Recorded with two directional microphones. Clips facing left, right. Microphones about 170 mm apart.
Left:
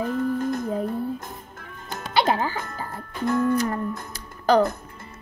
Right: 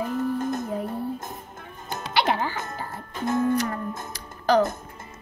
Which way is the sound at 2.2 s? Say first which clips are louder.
Left 2 dB; 40° left (ahead or behind).